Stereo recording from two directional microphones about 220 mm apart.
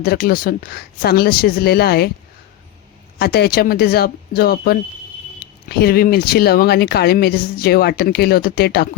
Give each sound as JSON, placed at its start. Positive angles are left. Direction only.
{"t": 0.0, "sound": "speech", "side_deg": 45}
{"t": 3.2, "sound": "speech", "side_deg": 45}